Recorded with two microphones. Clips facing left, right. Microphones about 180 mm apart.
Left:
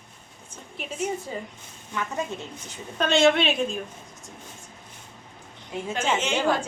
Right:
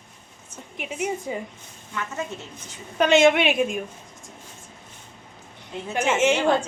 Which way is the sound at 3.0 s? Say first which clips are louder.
Right 3 dB; 15° right (ahead or behind).